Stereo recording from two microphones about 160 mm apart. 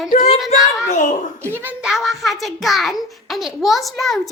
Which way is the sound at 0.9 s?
50° left (ahead or behind).